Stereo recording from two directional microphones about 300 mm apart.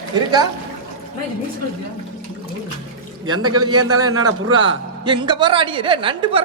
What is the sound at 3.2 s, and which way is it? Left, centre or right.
A man's voice, right.